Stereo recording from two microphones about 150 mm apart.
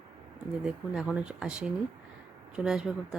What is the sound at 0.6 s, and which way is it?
Speech, 5° right (ahead or behind).